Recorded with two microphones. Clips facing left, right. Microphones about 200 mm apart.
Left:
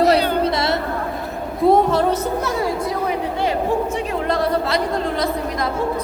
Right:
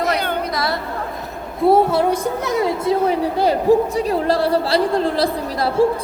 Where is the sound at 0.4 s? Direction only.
25° left (ahead or behind).